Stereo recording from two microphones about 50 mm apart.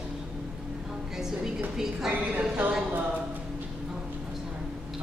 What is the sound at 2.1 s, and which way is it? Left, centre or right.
Speech, right.